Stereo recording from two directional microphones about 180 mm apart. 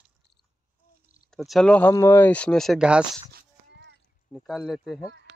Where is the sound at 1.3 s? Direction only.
Centre (ahead or behind).